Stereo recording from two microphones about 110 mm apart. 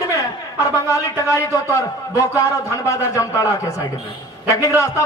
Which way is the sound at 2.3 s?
30° left (ahead or behind).